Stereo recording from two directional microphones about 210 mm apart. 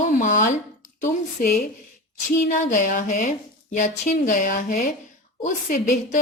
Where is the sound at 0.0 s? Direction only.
35° left (ahead or behind).